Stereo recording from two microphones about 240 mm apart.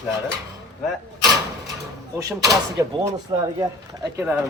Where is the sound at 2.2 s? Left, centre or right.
Centre.